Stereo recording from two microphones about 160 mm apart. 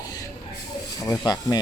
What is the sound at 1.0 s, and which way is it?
Speech, 20° left (ahead or behind).